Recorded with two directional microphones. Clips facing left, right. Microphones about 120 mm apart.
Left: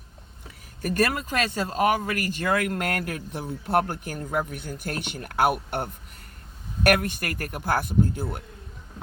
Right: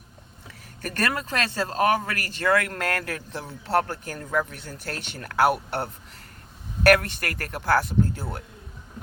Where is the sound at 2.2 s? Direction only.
15° left (ahead or behind).